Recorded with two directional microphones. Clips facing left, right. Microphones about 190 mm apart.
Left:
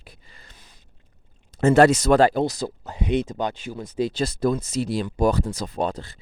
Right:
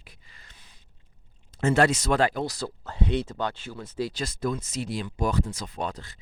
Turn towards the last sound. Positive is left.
turn(degrees=30)  # may be behind; listen again after turning